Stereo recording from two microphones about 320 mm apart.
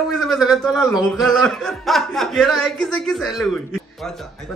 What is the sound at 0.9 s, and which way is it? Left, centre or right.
Speech, centre.